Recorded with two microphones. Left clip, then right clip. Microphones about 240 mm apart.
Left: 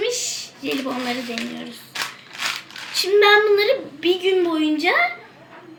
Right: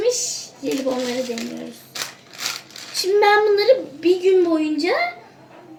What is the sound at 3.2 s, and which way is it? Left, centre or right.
Speech, centre.